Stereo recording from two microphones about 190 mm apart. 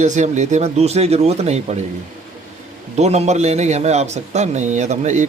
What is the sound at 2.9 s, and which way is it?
Speech, 35° right (ahead or behind).